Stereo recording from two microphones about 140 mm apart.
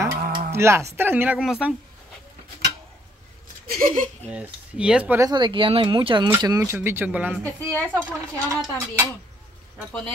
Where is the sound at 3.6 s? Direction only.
90° right.